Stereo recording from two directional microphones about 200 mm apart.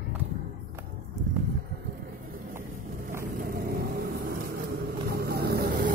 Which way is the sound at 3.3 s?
45° right (ahead or behind).